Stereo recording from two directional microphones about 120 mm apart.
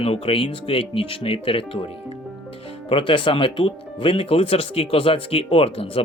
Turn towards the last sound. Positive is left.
turn(degrees=55)  # may be behind; listen again after turning